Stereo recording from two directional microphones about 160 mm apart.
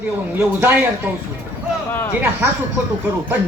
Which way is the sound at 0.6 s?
10° right (ahead or behind).